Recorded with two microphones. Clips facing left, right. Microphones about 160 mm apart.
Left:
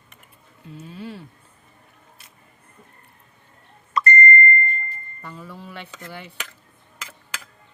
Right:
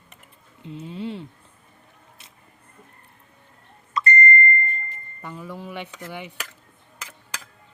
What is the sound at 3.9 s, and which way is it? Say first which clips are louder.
Beep: left 2 dB; 60° left (ahead or behind).